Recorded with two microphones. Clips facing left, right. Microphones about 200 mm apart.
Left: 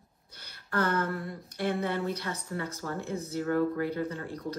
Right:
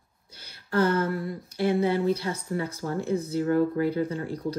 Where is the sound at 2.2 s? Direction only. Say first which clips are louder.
Right 5 dB; 15° right (ahead or behind).